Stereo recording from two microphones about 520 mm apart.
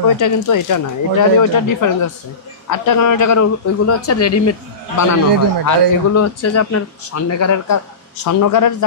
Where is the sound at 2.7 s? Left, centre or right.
Left.